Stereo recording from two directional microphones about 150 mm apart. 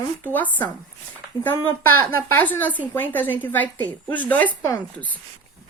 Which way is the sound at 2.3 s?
10° left (ahead or behind).